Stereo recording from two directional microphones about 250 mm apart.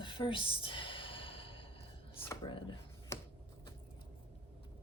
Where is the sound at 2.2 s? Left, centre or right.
Centre.